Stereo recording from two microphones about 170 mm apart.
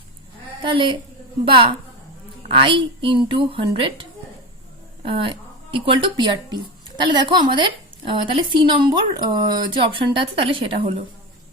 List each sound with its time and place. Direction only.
0.6 s a woman's voice: 30° right (ahead or behind)
5.0 s speech: 30° right (ahead or behind)